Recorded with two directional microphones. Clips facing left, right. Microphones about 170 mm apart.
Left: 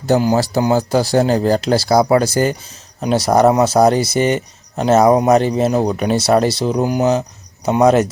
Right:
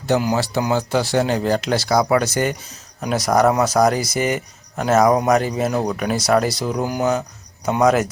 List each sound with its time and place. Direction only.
0.1 s speech: 35° left (ahead or behind)